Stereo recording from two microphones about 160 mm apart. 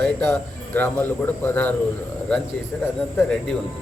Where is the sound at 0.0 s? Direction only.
10° left (ahead or behind).